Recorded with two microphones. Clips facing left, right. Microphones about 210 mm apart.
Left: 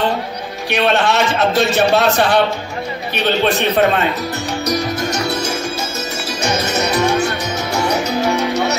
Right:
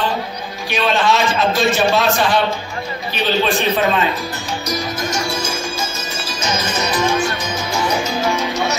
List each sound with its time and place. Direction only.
0.7 s a man's voice: 60° left (ahead or behind)
4.6 s music: 65° left (ahead or behind)